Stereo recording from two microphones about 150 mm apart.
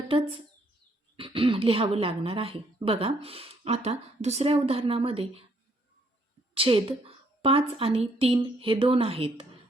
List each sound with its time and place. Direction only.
1.1 s speech: 35° right (ahead or behind)
6.5 s a woman's voice: 40° right (ahead or behind)